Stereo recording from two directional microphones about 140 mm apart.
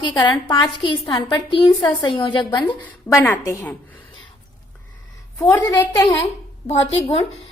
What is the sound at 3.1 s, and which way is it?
Speech, 15° left (ahead or behind).